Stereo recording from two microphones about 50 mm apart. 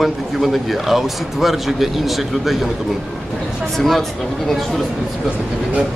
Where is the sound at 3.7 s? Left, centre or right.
Centre.